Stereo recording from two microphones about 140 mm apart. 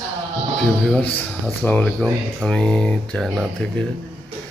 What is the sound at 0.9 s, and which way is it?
Speech, 5° left (ahead or behind).